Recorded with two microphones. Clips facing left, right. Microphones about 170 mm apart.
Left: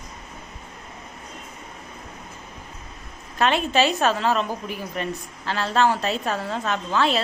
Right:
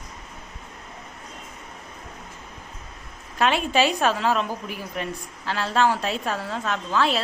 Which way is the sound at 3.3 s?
5° right (ahead or behind).